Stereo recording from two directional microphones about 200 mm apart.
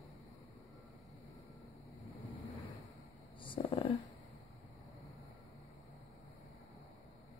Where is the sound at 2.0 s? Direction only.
Centre (ahead or behind).